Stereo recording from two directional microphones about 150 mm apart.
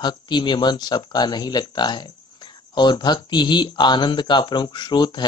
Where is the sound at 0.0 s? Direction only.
30° left (ahead or behind).